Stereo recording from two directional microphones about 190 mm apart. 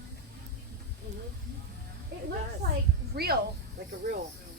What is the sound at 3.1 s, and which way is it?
Speech, 55° right (ahead or behind).